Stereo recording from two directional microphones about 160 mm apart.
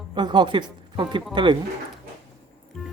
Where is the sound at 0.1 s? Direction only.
30° right (ahead or behind).